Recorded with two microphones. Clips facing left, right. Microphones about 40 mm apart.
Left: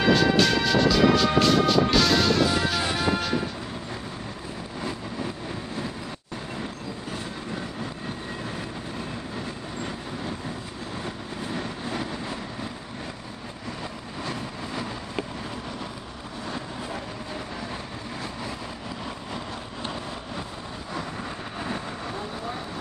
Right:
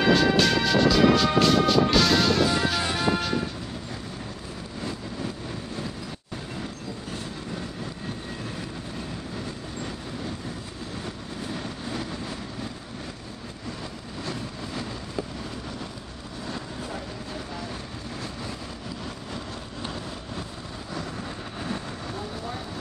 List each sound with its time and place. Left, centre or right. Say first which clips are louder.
0.0 s music: even; centre
6.6 s train: left 1 dB; centre
11.4 s vehicle: left 2 dB; centre
14.2 s vehicle: left 1 dB; centre
16.5 s vehicle: left 1 dB; centre
19.3 s vehicle: left 2 dB; centre